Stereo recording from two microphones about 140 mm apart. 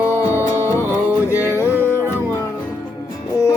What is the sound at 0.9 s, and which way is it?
Music, 15° right (ahead or behind).